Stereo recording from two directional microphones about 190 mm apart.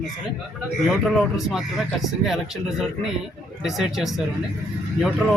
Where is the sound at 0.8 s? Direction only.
Centre (ahead or behind).